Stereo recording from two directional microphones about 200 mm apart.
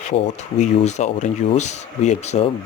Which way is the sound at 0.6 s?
35° left (ahead or behind).